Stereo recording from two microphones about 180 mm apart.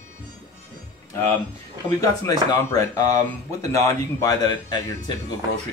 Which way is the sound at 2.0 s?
20° left (ahead or behind).